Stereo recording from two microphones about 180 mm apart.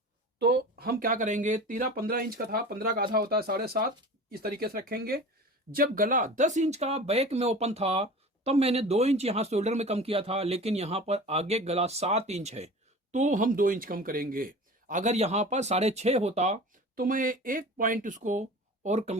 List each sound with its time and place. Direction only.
0.3 s speech: 65° right (ahead or behind); by 17.0 s 40° right (ahead or behind)
17.0 s speech: 50° right (ahead or behind)